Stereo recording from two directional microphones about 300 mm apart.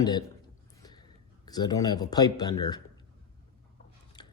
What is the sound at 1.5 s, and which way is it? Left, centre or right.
Speech, centre.